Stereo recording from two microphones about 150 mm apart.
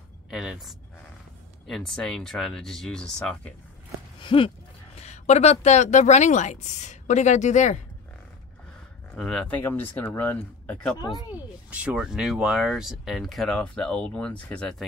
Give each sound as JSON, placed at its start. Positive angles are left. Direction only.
{"t": 0.3, "sound": "speech", "side_deg": -5}
{"t": 4.2, "sound": "speech", "side_deg": 35}
{"t": 4.9, "sound": "speech", "side_deg": 50}
{"t": 9.1, "sound": "speech", "side_deg": 5}
{"t": 11.0, "sound": "speech", "side_deg": 25}
{"t": 11.3, "sound": "speech", "side_deg": -10}